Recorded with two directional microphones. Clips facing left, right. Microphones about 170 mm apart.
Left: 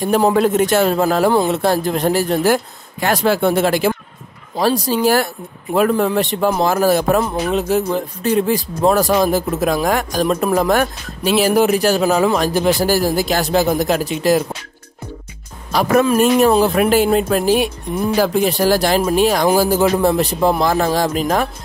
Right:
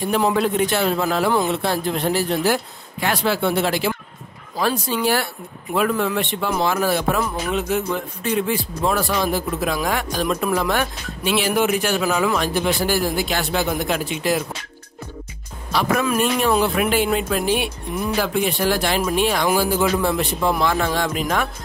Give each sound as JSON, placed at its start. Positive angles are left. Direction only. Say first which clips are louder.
{"t": 0.0, "sound": "a man's voice", "louder": "left 5 dB", "side_deg": 40}
{"t": 15.7, "sound": "speech", "louder": "left 6 dB", "side_deg": 45}